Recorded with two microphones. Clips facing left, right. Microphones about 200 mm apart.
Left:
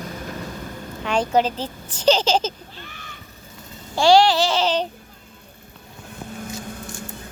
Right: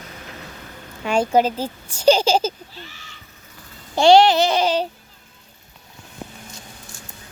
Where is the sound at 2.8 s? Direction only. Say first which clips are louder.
Left 2 dB; 55° left (ahead or behind).